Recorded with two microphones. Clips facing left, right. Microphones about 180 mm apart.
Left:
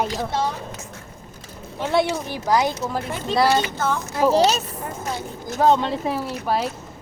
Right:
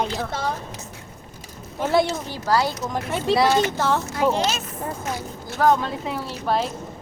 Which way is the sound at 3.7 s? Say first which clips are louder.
Right 2 dB; 85° right.